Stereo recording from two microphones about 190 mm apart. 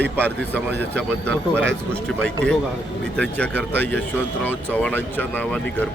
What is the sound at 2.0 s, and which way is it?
Speech, 5° left (ahead or behind).